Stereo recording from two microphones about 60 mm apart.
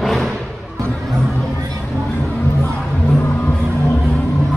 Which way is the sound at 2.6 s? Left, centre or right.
Left.